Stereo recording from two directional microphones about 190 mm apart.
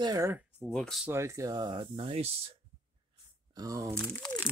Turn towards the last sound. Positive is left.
turn(degrees=0)  # may be behind; listen again after turning